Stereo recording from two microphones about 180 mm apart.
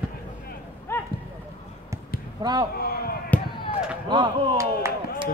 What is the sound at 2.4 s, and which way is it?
Speech, 20° right (ahead or behind).